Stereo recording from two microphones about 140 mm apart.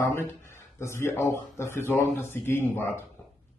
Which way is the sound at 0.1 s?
20° left (ahead or behind).